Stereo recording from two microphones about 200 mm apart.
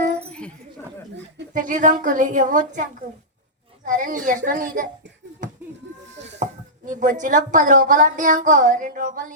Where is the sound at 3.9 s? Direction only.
40° right (ahead or behind).